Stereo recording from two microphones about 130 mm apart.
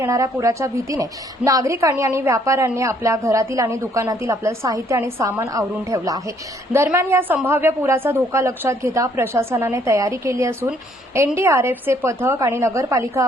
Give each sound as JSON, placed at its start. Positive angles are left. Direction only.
{"t": 0.0, "sound": "a woman's voice", "side_deg": -25}